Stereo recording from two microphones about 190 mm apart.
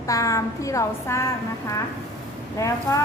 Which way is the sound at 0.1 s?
15° left (ahead or behind).